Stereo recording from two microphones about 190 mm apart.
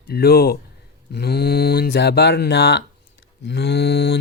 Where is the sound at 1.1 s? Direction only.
55° left (ahead or behind).